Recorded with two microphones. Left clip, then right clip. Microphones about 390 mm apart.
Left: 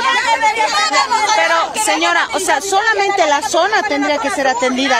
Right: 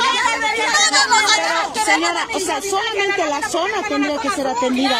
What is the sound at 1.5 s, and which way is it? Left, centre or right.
Speech, left.